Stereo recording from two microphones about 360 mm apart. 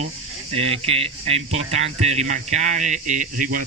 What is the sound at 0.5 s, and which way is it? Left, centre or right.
Speech, centre.